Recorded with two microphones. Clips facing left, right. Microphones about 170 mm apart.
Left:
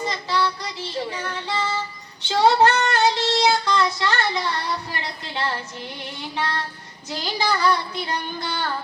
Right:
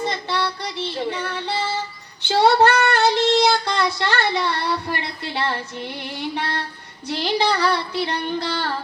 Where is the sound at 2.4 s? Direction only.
65° right (ahead or behind).